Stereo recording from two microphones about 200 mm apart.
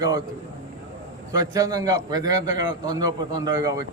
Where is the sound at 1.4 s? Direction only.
15° right (ahead or behind).